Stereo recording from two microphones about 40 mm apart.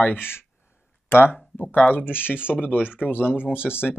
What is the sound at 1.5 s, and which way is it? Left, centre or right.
Speech, left.